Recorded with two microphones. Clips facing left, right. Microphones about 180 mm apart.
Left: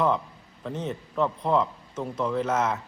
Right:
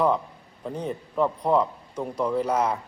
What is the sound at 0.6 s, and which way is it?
A man's voice, 10° right (ahead or behind).